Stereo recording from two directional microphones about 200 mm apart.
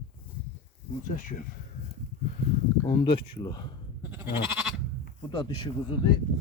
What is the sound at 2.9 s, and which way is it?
Speech, 25° left (ahead or behind).